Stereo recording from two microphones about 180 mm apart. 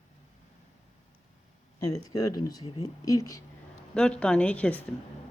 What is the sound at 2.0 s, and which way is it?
Speech, 20° left (ahead or behind).